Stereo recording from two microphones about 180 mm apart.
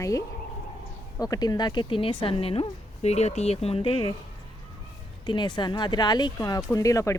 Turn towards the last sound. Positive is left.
turn(degrees=15)  # may be behind; listen again after turning